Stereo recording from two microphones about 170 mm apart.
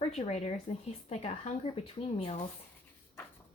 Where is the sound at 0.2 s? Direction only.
40° left (ahead or behind).